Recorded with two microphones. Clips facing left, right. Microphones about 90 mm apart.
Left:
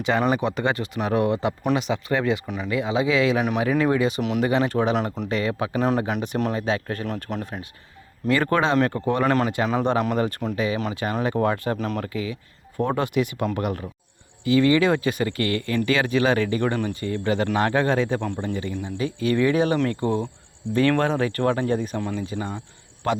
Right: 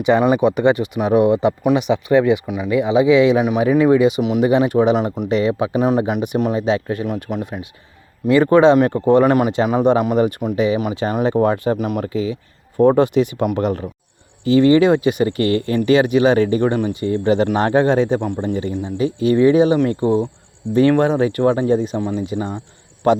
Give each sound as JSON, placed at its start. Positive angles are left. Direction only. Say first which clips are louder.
{"t": 0.0, "sound": "speech", "louder": "right 8 dB", "side_deg": -15}
{"t": 4.2, "sound": "speech", "louder": "right 6 dB", "side_deg": -5}
{"t": 4.4, "sound": "speech", "louder": "right 7 dB", "side_deg": -15}
{"t": 12.0, "sound": "speech", "louder": "right 7 dB", "side_deg": -25}